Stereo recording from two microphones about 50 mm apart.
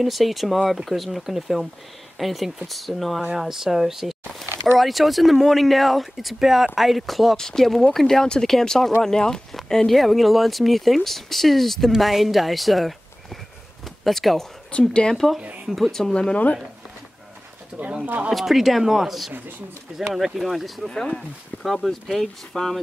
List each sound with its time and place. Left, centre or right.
0.0 s speech: centre
7.3 s speech: centre
14.0 s speech: centre
14.7 s a woman's voice: left
18.3 s speech: centre
19.9 s speech: centre
20.3 s speech: centre